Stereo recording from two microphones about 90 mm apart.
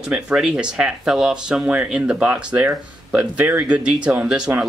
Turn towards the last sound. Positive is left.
turn(degrees=-10)  # may be behind; listen again after turning